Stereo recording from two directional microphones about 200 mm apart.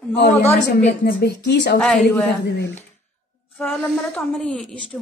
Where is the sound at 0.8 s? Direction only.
50° left (ahead or behind).